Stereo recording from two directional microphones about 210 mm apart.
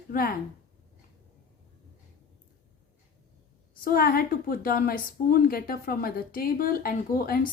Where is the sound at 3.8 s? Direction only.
45° left (ahead or behind).